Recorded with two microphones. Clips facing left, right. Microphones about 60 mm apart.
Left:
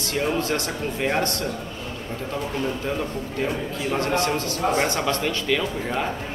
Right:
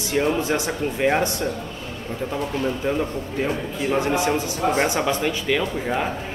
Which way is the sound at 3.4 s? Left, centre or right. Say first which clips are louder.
Right 2 dB; centre.